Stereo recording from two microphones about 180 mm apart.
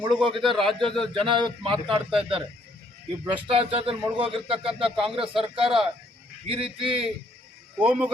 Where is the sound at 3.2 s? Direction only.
30° right (ahead or behind).